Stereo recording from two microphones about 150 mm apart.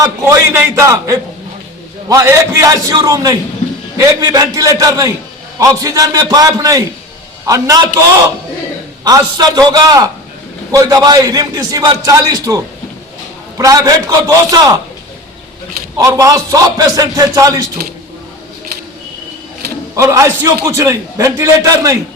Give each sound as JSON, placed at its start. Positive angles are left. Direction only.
{"t": 0.0, "sound": "a man's voice", "side_deg": -20}
{"t": 9.0, "sound": "a man's voice", "side_deg": -25}
{"t": 16.0, "sound": "a man's voice", "side_deg": -25}
{"t": 20.0, "sound": "a man's voice", "side_deg": -20}